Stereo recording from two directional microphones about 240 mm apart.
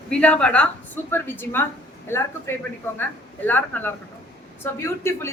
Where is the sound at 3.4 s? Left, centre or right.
Centre.